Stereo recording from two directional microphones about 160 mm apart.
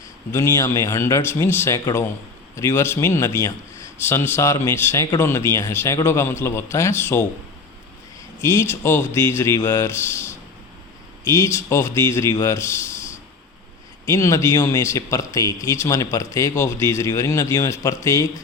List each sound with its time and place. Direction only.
0.3 s speech: 15° left (ahead or behind)
8.4 s speech: 15° left (ahead or behind)
11.3 s speech: 15° left (ahead or behind)
14.1 s a man's voice: 20° left (ahead or behind)